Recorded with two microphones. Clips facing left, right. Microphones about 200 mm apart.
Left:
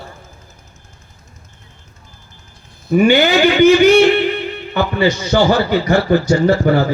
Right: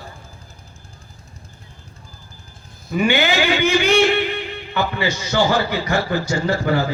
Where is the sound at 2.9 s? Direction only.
45° left (ahead or behind).